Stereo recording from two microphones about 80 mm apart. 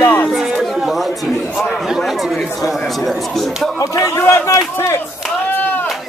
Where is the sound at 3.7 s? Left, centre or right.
Left.